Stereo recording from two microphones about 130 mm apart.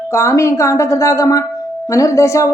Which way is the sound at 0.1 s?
20° left (ahead or behind).